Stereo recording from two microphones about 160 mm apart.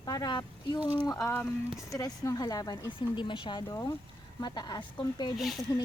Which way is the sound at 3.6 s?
20° left (ahead or behind).